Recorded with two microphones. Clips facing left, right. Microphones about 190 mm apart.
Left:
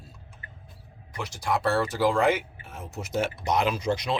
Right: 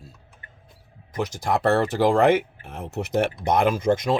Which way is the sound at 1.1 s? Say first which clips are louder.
Right 4 dB; 45° right (ahead or behind).